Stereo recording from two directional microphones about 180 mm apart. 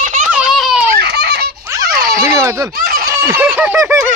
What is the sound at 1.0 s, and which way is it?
Baby laughter, 65° right (ahead or behind).